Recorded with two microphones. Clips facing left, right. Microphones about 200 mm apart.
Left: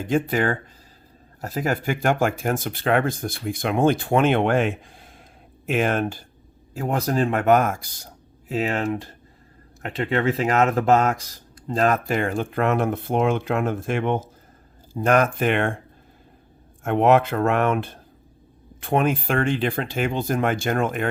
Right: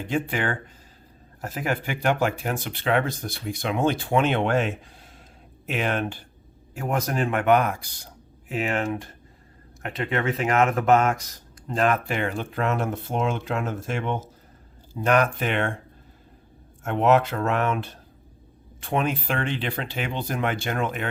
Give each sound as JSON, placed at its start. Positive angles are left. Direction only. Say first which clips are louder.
{"t": 0.0, "sound": "speech", "louder": "left 5 dB", "side_deg": 40}
{"t": 6.7, "sound": "speech", "louder": "left 3 dB", "side_deg": 30}
{"t": 8.4, "sound": "speech", "louder": "left 2 dB", "side_deg": 35}
{"t": 15.0, "sound": "speech", "louder": "left 3 dB", "side_deg": 45}
{"t": 16.8, "sound": "speech", "louder": "left 3 dB", "side_deg": 55}